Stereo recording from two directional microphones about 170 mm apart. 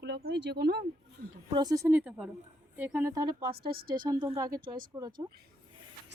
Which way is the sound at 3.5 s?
65° right (ahead or behind).